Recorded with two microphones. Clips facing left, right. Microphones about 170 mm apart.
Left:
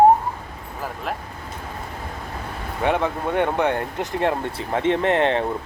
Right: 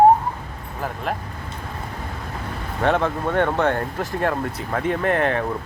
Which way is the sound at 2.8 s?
15° left (ahead or behind).